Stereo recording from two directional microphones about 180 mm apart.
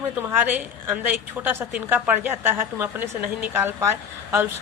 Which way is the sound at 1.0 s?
10° right (ahead or behind).